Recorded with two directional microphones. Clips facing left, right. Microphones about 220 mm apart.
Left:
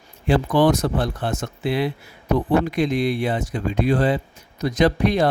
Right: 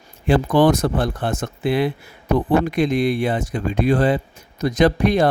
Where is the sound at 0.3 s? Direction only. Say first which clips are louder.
Right 2 dB; 50° right (ahead or behind).